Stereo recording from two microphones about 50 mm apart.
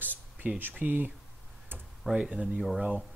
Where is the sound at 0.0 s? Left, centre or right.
Right.